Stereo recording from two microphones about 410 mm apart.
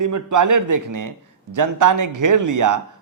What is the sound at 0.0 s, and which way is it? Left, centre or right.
A man's voice, right.